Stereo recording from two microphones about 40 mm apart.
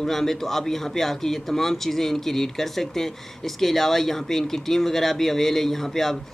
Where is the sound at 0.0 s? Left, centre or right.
Centre.